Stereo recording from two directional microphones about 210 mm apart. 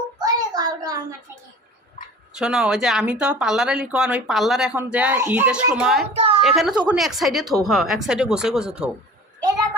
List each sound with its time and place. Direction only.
0.2 s child singing: 20° right (ahead or behind)
2.3 s speech: 5° right (ahead or behind)
6.1 s a sound: 25° right (ahead or behind)
6.4 s speech: centre (ahead or behind)